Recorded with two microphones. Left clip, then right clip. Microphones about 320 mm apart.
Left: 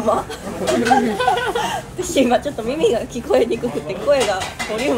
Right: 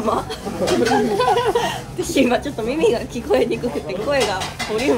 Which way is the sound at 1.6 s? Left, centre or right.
Centre.